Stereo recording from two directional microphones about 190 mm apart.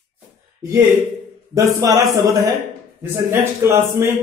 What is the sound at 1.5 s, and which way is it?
A man's voice, 20° right (ahead or behind).